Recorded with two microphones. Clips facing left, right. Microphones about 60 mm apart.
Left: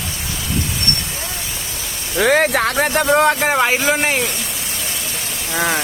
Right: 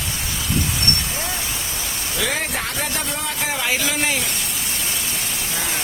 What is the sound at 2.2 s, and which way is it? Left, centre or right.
Speech, left.